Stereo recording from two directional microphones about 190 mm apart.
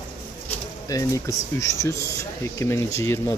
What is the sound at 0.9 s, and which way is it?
Speech, 15° left (ahead or behind).